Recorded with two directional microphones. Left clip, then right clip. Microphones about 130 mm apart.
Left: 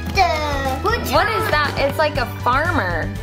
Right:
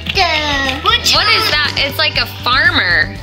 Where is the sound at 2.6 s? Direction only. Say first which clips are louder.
Right 9 dB; 30° right (ahead or behind).